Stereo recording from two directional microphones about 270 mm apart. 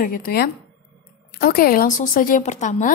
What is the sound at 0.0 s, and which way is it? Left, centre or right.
Speech, left.